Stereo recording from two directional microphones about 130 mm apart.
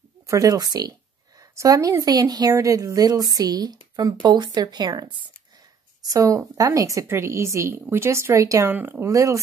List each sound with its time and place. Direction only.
0.3 s a woman's voice: 25° right (ahead or behind)